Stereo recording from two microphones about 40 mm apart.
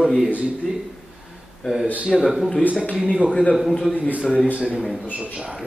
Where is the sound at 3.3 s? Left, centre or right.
Left.